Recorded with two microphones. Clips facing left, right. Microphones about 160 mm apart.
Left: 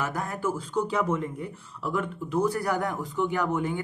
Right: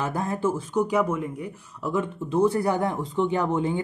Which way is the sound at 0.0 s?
25° right (ahead or behind).